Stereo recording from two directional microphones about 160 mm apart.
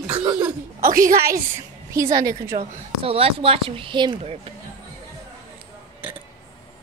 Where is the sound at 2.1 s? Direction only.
20° right (ahead or behind).